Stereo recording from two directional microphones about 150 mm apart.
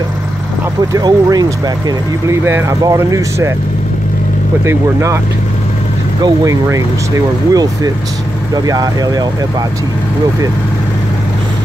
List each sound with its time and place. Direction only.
0.9 s speech: 25° right (ahead or behind)
4.6 s speech: 20° right (ahead or behind)
6.2 s speech: 20° right (ahead or behind)